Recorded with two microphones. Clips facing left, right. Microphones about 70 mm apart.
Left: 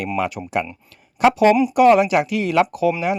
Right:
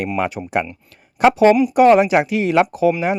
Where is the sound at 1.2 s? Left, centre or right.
Right.